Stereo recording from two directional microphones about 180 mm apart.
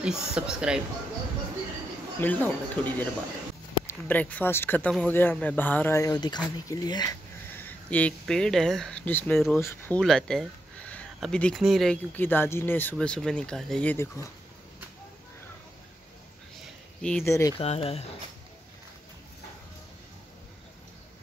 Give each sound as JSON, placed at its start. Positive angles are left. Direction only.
{"t": 0.0, "sound": "speech", "side_deg": -5}
{"t": 2.1, "sound": "speech", "side_deg": 10}
{"t": 7.5, "sound": "speech", "side_deg": 10}
{"t": 9.9, "sound": "a sound", "side_deg": 5}
{"t": 11.1, "sound": "speech", "side_deg": 5}
{"t": 17.0, "sound": "speech", "side_deg": 5}
{"t": 17.3, "sound": "speech", "side_deg": 15}
{"t": 17.6, "sound": "speech", "side_deg": 35}